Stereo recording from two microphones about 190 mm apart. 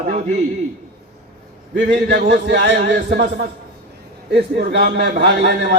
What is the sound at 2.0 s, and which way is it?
Speech, 55° right (ahead or behind).